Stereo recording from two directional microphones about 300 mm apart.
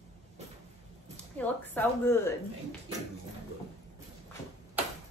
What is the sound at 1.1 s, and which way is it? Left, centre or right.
Speech, centre.